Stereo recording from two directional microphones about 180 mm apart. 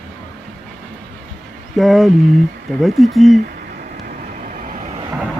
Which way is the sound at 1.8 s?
Centre (ahead or behind).